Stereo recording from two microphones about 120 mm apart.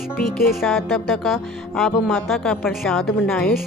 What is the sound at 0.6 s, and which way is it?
Speech, centre (ahead or behind).